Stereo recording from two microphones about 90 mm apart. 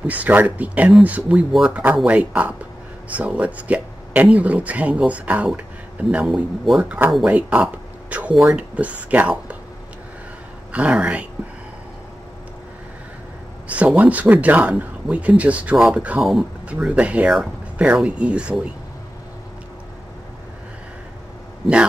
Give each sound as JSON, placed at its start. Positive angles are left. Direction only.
{"t": 0.0, "sound": "speech", "side_deg": -15}
{"t": 6.2, "sound": "speech", "side_deg": 0}
{"t": 6.8, "sound": "speech", "side_deg": -20}
{"t": 10.7, "sound": "speech", "side_deg": -15}
{"t": 13.7, "sound": "speech", "side_deg": -15}
{"t": 16.2, "sound": "speech", "side_deg": 0}
{"t": 16.9, "sound": "speech", "side_deg": -15}